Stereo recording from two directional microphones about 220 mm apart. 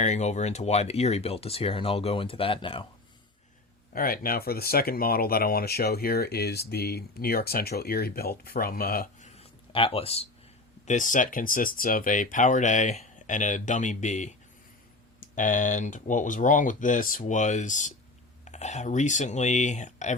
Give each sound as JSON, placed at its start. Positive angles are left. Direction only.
{"t": 0.0, "sound": "speech", "side_deg": 30}
{"t": 3.9, "sound": "speech", "side_deg": 40}
{"t": 9.3, "sound": "a sound", "side_deg": 25}
{"t": 10.8, "sound": "speech", "side_deg": 35}